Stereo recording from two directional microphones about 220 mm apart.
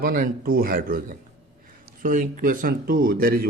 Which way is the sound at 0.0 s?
40° right (ahead or behind).